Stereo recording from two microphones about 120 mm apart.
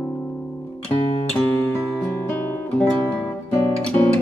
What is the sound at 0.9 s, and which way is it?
Music, 45° left (ahead or behind).